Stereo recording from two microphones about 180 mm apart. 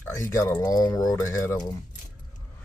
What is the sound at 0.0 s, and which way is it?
Speech, 15° left (ahead or behind).